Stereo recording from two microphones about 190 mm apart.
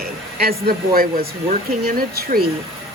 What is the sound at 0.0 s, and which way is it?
Speech, 50° right (ahead or behind).